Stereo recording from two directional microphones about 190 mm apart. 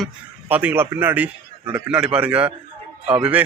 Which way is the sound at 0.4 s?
10° right (ahead or behind).